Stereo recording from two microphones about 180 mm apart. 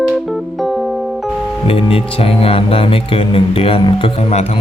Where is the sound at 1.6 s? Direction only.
30° left (ahead or behind).